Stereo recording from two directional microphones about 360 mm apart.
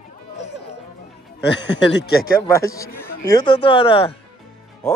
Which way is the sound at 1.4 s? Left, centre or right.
Left.